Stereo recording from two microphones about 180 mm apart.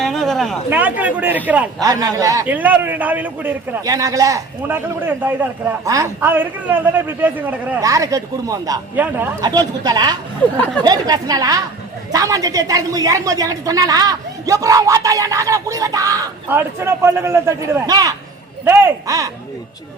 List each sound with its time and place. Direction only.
0.0 s a sound: centre (ahead or behind)
0.7 s a man's voice: 10° right (ahead or behind)
9.4 s a woman's voice: 20° right (ahead or behind)